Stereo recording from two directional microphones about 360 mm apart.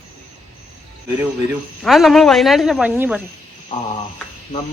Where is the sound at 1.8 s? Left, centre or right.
Centre.